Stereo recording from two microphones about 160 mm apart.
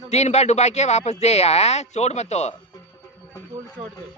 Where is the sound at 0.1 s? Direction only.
45° left (ahead or behind).